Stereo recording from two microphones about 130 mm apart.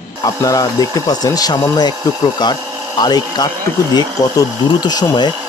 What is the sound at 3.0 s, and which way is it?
Speech, 30° left (ahead or behind).